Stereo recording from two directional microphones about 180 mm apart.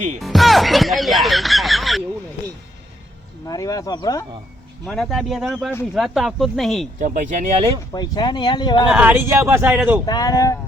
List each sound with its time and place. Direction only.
0.2 s music: centre (ahead or behind)
3.4 s speech: 20° left (ahead or behind)
4.9 s speech: centre (ahead or behind)
7.0 s speech: 45° right (ahead or behind)
7.9 s speech: 20° left (ahead or behind)
8.9 s speech: 10° right (ahead or behind)
10.1 s speech: 20° left (ahead or behind)